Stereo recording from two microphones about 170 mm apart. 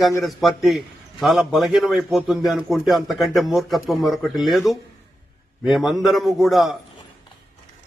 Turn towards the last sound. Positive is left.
turn(degrees=0)  # may be behind; listen again after turning